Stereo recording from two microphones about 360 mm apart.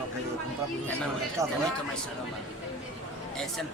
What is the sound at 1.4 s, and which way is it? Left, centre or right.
Speech, centre.